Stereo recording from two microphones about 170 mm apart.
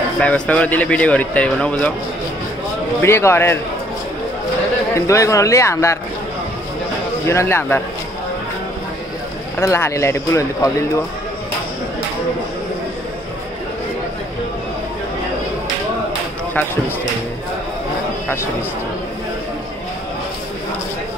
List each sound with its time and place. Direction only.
0.2 s speech: 5° left (ahead or behind)
3.0 s speech: 15° left (ahead or behind)
4.9 s speech: 20° left (ahead or behind)
7.2 s speech: 15° left (ahead or behind)
9.6 s speech: 15° left (ahead or behind)